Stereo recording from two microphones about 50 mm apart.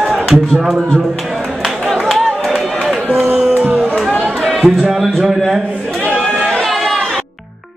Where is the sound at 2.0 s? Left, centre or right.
Centre.